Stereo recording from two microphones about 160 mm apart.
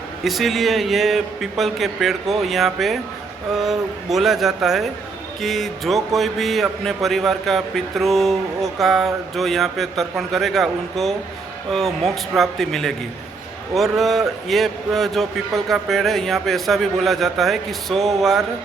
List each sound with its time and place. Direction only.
0.3 s speech: centre (ahead or behind)